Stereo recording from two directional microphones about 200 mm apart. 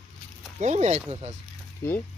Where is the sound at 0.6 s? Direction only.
35° right (ahead or behind).